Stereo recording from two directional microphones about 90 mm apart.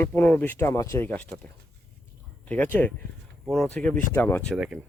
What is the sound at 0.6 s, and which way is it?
Speech, 35° left (ahead or behind).